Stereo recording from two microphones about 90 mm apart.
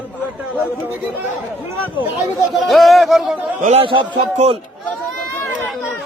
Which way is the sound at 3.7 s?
75° right (ahead or behind).